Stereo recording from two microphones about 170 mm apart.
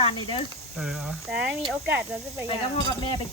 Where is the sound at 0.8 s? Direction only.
Centre (ahead or behind).